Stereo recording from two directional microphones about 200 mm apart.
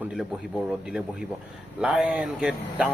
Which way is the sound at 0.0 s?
5° right (ahead or behind).